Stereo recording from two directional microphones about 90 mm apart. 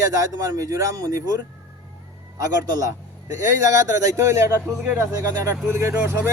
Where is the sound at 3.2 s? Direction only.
35° right (ahead or behind).